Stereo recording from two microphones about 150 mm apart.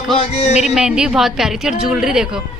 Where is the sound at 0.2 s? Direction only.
50° left (ahead or behind).